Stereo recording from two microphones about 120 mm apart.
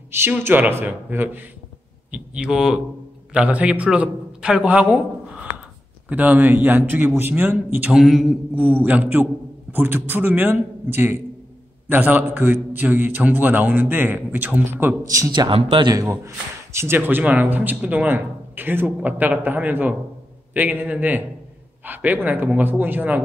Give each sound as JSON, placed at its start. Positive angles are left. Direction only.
{"t": 0.1, "sound": "speech", "side_deg": -20}
{"t": 6.0, "sound": "speech", "side_deg": -15}
{"t": 7.9, "sound": "mantra", "side_deg": -5}
{"t": 8.8, "sound": "speech", "side_deg": -15}
{"t": 15.5, "sound": "speech", "side_deg": -45}
{"t": 15.9, "sound": "a man's voice", "side_deg": -30}